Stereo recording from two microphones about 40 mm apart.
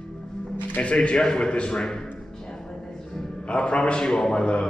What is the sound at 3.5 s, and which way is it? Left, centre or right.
A man's voice, left.